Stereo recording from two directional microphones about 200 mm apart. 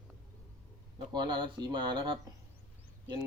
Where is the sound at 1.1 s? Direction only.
20° right (ahead or behind).